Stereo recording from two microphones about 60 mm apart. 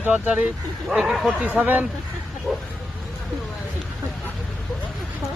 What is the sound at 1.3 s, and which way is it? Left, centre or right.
Speech, right.